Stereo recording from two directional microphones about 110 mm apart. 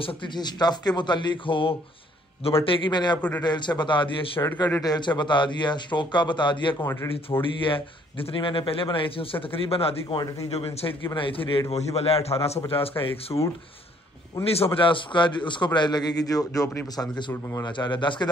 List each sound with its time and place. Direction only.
0.0 s a man's voice: 45° left (ahead or behind)
3.2 s a man's voice: 15° left (ahead or behind)
3.4 s a man's voice: 40° left (ahead or behind)
4.4 s speech: 25° left (ahead or behind)
4.8 s a man's voice: 40° left (ahead or behind)
11.7 s a man's voice: 70° left (ahead or behind)
14.4 s a man's voice: 55° left (ahead or behind); by 17.6 s 30° left (ahead or behind)
17.6 s a man's voice: 45° left (ahead or behind)